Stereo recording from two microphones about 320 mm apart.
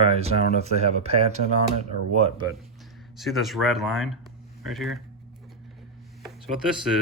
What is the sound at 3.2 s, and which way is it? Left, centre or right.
Speech, centre.